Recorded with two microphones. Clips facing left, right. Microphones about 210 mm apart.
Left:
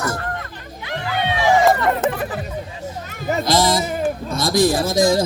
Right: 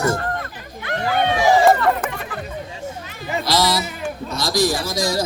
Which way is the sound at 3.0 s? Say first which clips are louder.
Left 5 dB; 45° left (ahead or behind).